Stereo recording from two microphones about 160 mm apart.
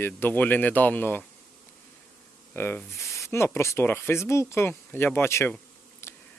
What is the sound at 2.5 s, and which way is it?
Speech, 15° left (ahead or behind).